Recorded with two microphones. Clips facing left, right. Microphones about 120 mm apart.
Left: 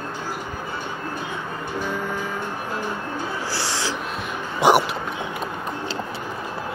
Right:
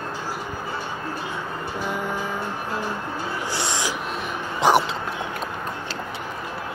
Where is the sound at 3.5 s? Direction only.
20° right (ahead or behind).